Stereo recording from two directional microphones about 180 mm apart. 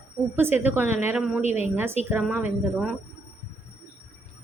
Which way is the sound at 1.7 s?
10° right (ahead or behind).